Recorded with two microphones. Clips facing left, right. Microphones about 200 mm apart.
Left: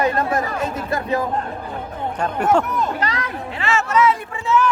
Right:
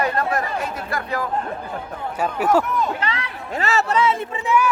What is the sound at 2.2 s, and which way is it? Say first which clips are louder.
Speech: even; 5° right (ahead or behind).